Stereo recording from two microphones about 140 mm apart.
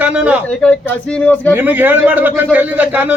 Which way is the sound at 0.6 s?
5° left (ahead or behind).